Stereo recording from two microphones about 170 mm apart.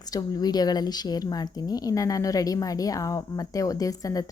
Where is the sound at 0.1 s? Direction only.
25° left (ahead or behind).